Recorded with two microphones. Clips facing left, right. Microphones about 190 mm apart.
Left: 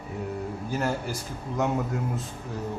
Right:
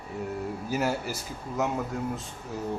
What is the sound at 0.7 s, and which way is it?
Speech, 5° right (ahead or behind).